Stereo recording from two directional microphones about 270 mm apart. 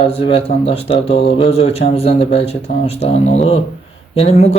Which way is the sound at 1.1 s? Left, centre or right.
Left.